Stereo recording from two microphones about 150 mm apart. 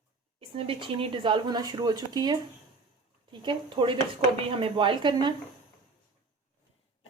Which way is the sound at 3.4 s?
35° right (ahead or behind).